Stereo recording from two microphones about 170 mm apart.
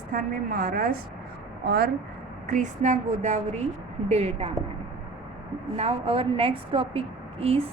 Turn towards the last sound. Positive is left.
turn(degrees=-35)  # may be behind; listen again after turning